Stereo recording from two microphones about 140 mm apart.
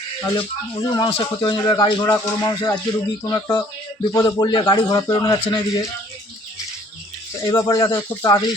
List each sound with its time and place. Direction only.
0.3 s a man's voice: 35° left (ahead or behind)
7.4 s a man's voice: 25° left (ahead or behind)